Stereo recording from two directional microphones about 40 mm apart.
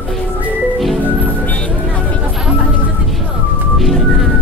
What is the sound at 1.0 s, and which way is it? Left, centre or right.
Music, right.